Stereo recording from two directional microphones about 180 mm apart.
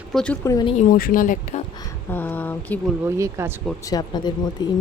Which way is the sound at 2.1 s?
10° left (ahead or behind).